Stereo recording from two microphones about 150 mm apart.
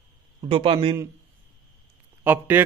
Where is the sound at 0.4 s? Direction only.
35° right (ahead or behind).